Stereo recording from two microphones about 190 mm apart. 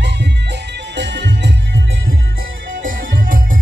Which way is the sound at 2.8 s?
45° right (ahead or behind).